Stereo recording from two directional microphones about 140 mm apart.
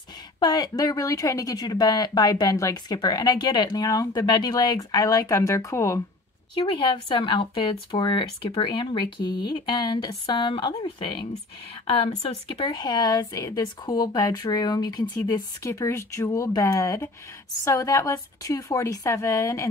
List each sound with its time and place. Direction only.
0.4 s speech: 30° left (ahead or behind)
6.5 s speech: 35° left (ahead or behind)
12.4 s speech: 30° left (ahead or behind)